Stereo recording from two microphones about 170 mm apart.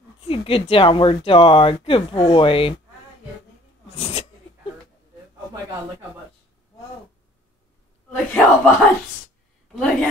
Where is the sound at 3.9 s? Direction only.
35° left (ahead or behind).